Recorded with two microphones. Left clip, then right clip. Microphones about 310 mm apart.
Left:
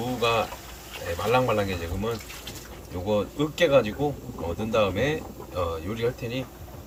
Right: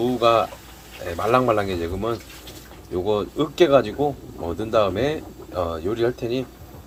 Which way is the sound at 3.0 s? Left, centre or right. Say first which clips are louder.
Right 2 dB; centre.